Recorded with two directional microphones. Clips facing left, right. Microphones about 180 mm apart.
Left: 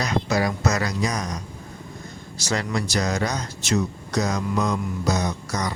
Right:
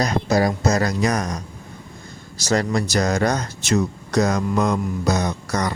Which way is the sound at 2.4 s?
40° right (ahead or behind).